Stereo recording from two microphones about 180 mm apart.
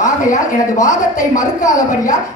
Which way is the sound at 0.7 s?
20° left (ahead or behind).